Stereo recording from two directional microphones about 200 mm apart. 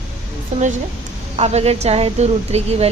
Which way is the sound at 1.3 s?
30° right (ahead or behind).